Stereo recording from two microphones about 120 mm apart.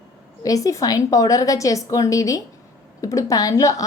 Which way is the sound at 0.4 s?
30° left (ahead or behind).